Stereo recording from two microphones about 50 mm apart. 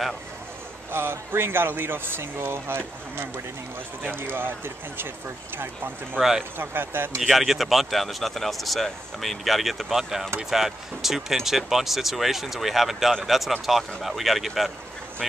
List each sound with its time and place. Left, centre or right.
0.9 s speech: right
4.2 s speech: right
6.6 s speech: right
7.2 s speech: centre